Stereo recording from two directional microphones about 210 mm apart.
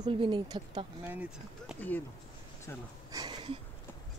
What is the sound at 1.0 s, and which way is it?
Speech, 5° right (ahead or behind).